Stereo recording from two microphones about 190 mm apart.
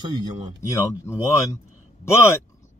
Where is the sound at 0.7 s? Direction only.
15° left (ahead or behind).